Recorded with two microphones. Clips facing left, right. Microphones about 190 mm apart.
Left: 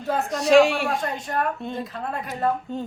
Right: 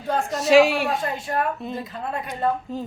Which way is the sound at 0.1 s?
Centre (ahead or behind).